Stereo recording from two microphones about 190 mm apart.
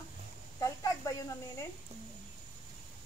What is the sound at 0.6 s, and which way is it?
Speech, 15° left (ahead or behind).